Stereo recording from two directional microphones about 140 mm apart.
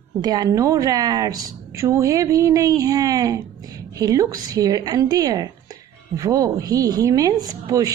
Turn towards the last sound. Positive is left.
turn(degrees=-25)  # may be behind; listen again after turning